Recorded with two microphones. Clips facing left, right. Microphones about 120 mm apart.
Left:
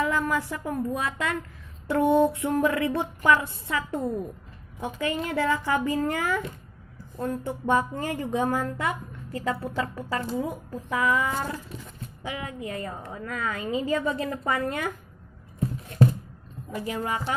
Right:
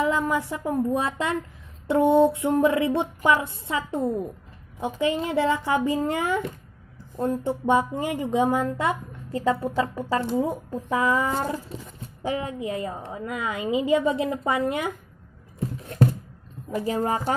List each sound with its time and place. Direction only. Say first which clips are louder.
0.0 s a sound: right 2 dB; 20° right (ahead or behind)
0.5 s speech: right 4 dB; 25° right (ahead or behind)
11.4 s speech: right 4 dB; 20° right (ahead or behind)
12.2 s speech: right 6 dB; 35° right (ahead or behind)
16.7 s a woman's voice: right 5 dB; 35° right (ahead or behind)